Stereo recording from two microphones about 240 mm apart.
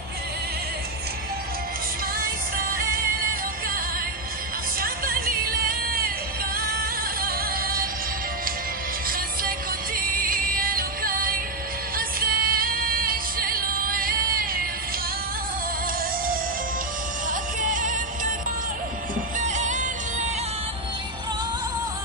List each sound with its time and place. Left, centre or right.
2.1 s music: right
9.9 s music: right
17.3 s music: right
19.3 s music: right